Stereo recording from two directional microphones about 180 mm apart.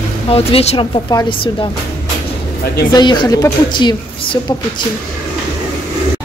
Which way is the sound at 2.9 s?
25° left (ahead or behind).